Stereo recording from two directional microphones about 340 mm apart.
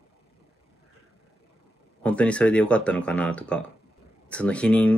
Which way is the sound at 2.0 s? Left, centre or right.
Centre.